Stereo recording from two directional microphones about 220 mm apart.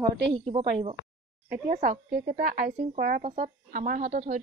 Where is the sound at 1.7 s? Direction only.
40° right (ahead or behind).